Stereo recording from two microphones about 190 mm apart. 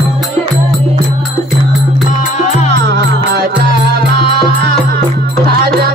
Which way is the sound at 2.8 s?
60° right (ahead or behind).